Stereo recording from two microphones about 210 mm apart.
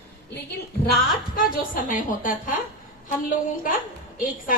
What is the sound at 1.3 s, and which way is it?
A woman's voice, 40° left (ahead or behind).